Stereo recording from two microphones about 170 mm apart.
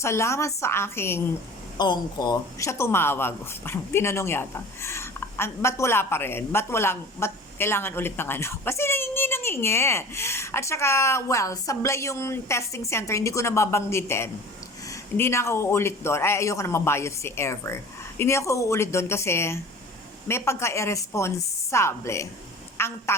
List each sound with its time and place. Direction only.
0.0 s speech: 15° left (ahead or behind)
1.8 s a woman's voice: 25° left (ahead or behind)